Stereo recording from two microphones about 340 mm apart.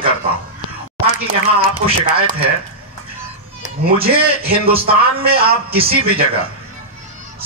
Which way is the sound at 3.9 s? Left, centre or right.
Right.